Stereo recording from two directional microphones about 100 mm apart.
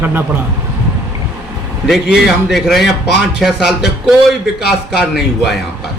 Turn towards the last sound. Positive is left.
turn(degrees=-5)  # may be behind; listen again after turning